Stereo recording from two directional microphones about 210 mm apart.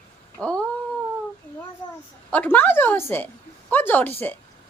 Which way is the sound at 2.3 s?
10° left (ahead or behind).